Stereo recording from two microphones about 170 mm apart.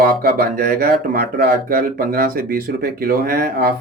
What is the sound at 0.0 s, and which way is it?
Speech, 65° right (ahead or behind).